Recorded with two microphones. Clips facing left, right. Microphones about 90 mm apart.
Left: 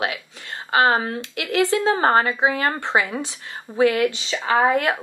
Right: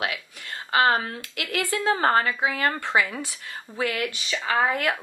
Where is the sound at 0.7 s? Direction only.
25° left (ahead or behind).